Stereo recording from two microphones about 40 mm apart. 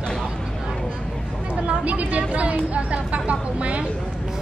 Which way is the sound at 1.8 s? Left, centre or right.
Right.